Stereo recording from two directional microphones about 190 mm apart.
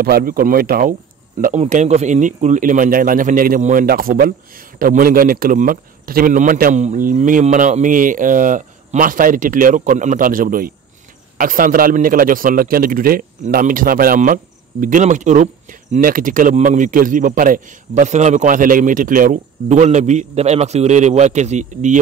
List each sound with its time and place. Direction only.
0.0 s a man's voice: 50° right (ahead or behind)